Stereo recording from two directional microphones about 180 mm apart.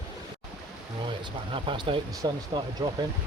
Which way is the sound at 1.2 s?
30° right (ahead or behind).